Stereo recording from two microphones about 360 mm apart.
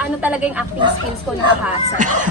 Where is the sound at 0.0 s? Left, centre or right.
Centre.